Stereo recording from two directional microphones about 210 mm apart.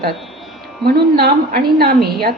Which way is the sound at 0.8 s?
45° right (ahead or behind).